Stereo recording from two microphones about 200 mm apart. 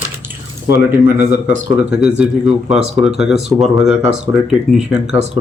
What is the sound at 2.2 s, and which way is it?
Speech, 5° right (ahead or behind).